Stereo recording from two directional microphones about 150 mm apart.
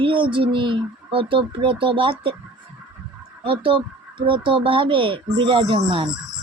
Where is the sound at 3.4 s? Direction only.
35° right (ahead or behind).